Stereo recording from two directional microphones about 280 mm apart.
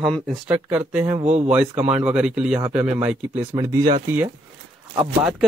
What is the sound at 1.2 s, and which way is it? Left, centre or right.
Speech, right.